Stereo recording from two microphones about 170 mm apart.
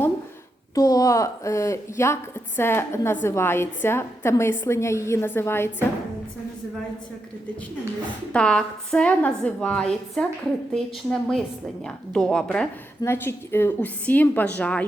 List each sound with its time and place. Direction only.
0.7 s a woman's voice: 20° left (ahead or behind)
8.3 s a woman's voice: 5° left (ahead or behind)